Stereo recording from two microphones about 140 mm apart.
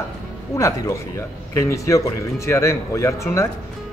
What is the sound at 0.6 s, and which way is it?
Speech, 25° left (ahead or behind).